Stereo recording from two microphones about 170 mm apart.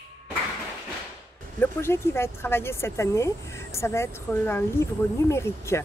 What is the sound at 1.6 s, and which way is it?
Speech, 15° left (ahead or behind).